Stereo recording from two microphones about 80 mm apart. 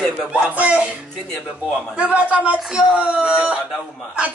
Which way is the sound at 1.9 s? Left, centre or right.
Centre.